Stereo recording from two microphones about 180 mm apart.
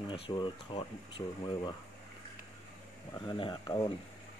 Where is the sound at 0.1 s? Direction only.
25° left (ahead or behind).